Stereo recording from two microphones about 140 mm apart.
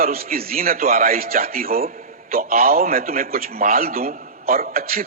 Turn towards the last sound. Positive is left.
turn(degrees=-90)